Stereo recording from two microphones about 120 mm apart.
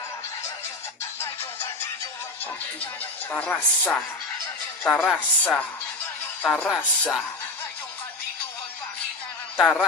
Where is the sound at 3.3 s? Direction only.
15° left (ahead or behind).